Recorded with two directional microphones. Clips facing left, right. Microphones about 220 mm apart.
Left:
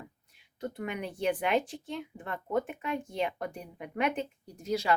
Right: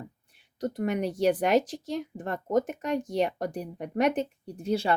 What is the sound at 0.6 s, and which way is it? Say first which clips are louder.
Speech: right 7 dB; 40° right (ahead or behind).